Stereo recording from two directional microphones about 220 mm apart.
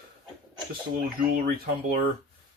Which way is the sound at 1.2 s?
40° right (ahead or behind).